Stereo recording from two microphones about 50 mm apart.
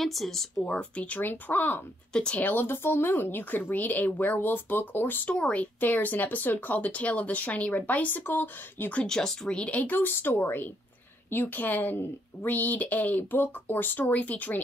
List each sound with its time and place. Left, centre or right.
0.0 s speech: centre
0.7 s speech: left
1.2 s speech: left
8.2 s speech: left
9.0 s a woman's voice: centre; by 11.5 s left
11.5 s speech: left